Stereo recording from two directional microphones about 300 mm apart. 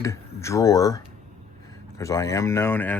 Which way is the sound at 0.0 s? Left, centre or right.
Centre.